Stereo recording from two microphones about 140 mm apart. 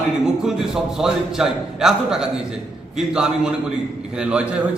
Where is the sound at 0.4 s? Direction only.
5° right (ahead or behind).